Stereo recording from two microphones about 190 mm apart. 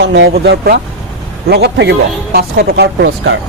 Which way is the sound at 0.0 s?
65° right (ahead or behind).